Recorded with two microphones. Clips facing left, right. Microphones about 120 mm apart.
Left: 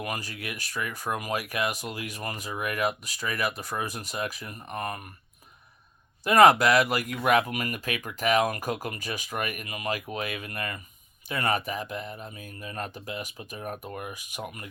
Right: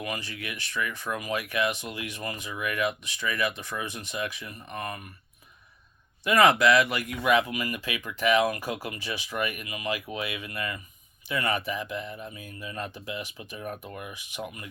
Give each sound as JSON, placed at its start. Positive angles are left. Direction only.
{"t": 0.0, "sound": "speech", "side_deg": 40}
{"t": 6.2, "sound": "speech", "side_deg": 40}